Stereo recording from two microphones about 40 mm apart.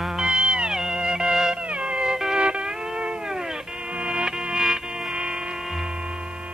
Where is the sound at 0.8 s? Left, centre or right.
Centre.